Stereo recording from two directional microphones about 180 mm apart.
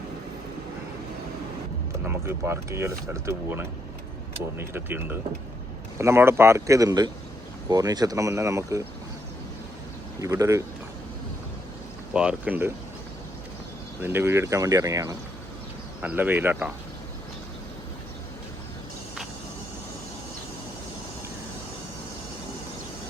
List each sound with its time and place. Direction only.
2.0 s speech: 15° right (ahead or behind)
10.2 s speech: 20° right (ahead or behind)
12.1 s speech: 5° right (ahead or behind)
14.0 s speech: 10° right (ahead or behind)